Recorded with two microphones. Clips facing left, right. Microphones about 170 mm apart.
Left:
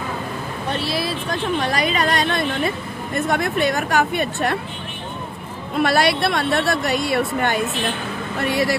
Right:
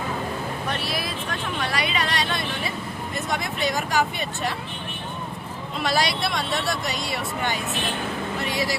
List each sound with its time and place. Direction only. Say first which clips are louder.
0.7 s a sound: left 5 dB; 30° left (ahead or behind); by 2.7 s 55° left (ahead or behind)
3.2 s speech: left 8 dB; 55° left (ahead or behind)
5.8 s speech: left 7 dB; 60° left (ahead or behind)